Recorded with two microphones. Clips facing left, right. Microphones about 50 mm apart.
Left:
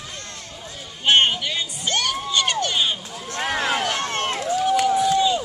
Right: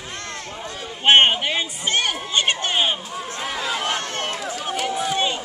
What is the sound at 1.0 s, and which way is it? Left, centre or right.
Crowd, right.